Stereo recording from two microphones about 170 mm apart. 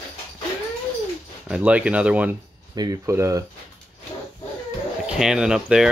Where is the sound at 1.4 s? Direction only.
5° right (ahead or behind).